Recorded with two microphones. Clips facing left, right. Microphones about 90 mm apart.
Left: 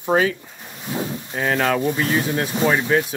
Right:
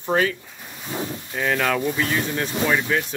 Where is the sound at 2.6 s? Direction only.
20° left (ahead or behind).